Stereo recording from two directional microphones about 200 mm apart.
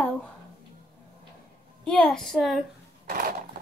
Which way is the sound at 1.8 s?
5° left (ahead or behind).